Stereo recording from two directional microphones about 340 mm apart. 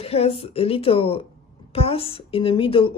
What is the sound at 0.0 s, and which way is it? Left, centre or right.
Speech, centre.